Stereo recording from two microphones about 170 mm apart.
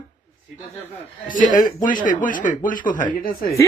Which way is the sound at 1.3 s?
50° left (ahead or behind).